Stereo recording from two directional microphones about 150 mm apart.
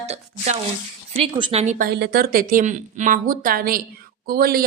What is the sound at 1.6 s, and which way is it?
Speech, 80° right.